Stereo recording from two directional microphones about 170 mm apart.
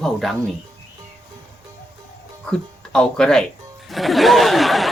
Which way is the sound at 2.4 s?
5° left (ahead or behind).